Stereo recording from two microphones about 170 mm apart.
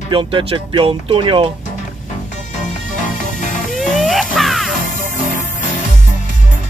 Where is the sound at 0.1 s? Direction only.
30° right (ahead or behind).